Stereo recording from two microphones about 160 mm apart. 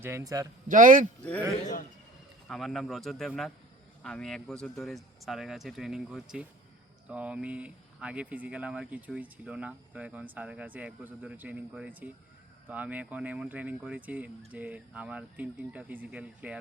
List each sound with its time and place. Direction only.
0.0 s a man's voice: 15° right (ahead or behind)
0.7 s speech: 55° right (ahead or behind)
1.2 s a man's voice: 10° left (ahead or behind)
1.6 s a man's voice: 55° left (ahead or behind)
2.5 s speech: centre (ahead or behind)